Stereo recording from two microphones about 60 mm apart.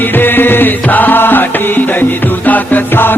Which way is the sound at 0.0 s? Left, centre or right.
Left.